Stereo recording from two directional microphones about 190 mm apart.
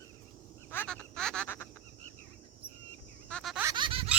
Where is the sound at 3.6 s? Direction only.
20° right (ahead or behind).